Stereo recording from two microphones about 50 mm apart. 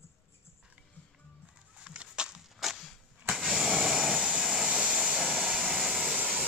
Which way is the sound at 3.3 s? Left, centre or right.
Centre.